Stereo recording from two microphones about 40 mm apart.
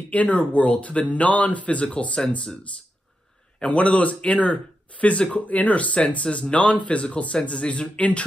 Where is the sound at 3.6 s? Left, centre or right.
Left.